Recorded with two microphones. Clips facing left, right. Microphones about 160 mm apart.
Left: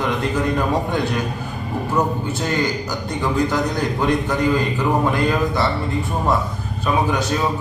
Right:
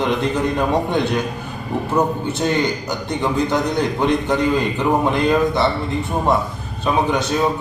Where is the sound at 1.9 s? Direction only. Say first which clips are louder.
Right 2 dB; 20° right (ahead or behind).